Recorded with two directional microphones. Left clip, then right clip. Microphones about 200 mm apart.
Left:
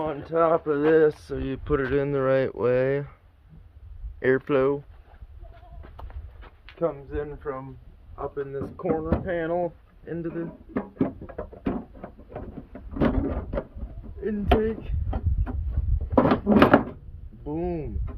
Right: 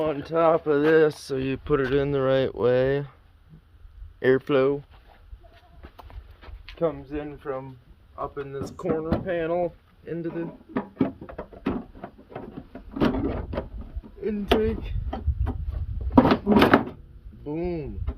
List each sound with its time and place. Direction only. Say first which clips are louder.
0.0 s speech: right 2 dB; 90° right; by 1.7 s 50° right (ahead or behind)
1.7 s speech: right 1 dB; 30° right (ahead or behind)
4.2 s speech: right 1 dB; 30° right (ahead or behind)
6.7 s speech: right 1 dB; 65° right (ahead or behind); by 7.6 s 45° right (ahead or behind)
8.1 s speech: left 1 dB; 25° right (ahead or behind)
10.2 s music: right 1 dB; 5° right (ahead or behind)
14.2 s speech: even; 10° right (ahead or behind)
16.1 s drawer open or close: right 1 dB; 5° right (ahead or behind)
17.5 s speech: even; 15° right (ahead or behind)